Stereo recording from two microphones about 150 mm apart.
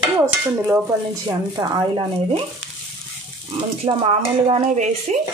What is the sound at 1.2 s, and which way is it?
Speech, 30° right (ahead or behind).